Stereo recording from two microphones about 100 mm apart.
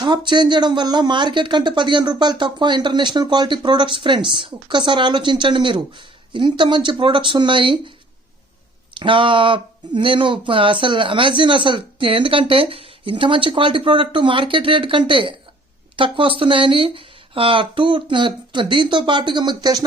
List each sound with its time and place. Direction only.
0.3 s speech: 50° right (ahead or behind)
9.0 s speech: 55° right (ahead or behind)